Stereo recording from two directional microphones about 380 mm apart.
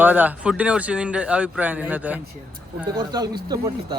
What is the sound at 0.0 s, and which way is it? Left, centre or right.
Speech, centre.